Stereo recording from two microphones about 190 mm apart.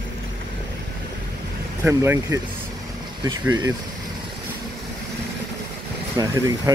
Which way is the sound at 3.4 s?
15° right (ahead or behind).